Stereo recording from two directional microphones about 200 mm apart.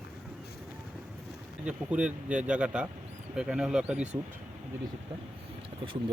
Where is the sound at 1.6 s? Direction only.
5° right (ahead or behind).